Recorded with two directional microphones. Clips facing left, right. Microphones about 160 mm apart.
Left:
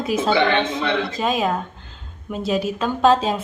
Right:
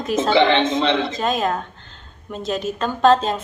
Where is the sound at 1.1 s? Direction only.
5° left (ahead or behind).